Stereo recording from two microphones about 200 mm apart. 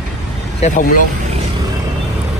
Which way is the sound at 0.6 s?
40° left (ahead or behind).